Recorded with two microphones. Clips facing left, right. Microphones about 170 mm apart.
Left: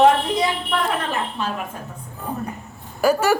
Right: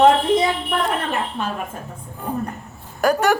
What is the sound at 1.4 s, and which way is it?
Speech, 55° right (ahead or behind).